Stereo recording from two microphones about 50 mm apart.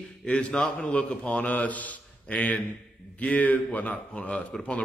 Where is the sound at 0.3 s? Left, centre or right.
Left.